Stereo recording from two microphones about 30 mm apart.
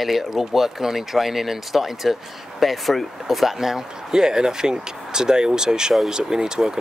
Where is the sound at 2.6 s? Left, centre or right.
Centre.